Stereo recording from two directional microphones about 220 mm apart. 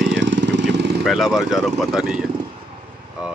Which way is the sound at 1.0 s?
Centre (ahead or behind).